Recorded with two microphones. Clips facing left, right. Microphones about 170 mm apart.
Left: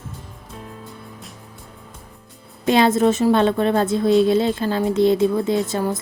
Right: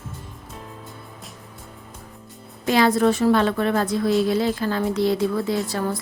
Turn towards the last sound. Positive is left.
turn(degrees=20)  # may be behind; listen again after turning